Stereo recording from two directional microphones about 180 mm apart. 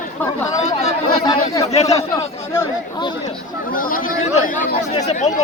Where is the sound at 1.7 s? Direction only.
35° left (ahead or behind).